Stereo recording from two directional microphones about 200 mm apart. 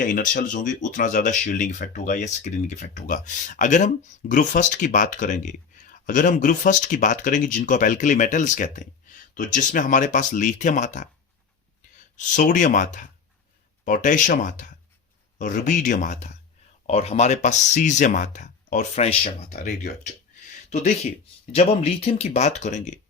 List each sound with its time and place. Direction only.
0.0 s speech: 40° left (ahead or behind)
12.1 s speech: 40° left (ahead or behind)